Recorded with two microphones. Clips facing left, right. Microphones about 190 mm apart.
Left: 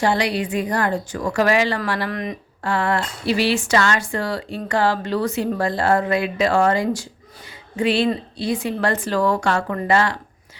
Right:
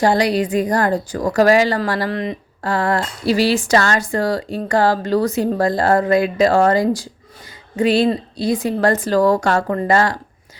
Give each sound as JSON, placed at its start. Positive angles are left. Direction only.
{"t": 0.0, "sound": "a woman's voice", "side_deg": -40}